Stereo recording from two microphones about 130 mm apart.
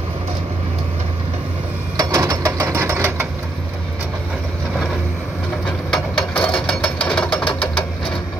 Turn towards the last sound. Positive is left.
turn(degrees=45)  # may be behind; listen again after turning